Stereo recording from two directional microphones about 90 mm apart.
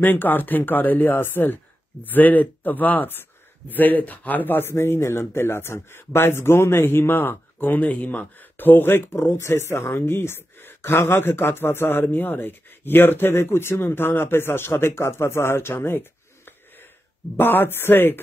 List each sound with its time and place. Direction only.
0.0 s speech: 20° left (ahead or behind)